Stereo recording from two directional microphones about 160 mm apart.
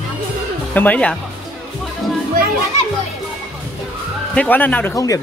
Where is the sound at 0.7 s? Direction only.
10° left (ahead or behind).